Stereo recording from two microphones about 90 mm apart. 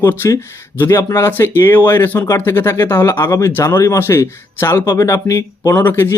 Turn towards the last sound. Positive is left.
turn(degrees=25)  # may be behind; listen again after turning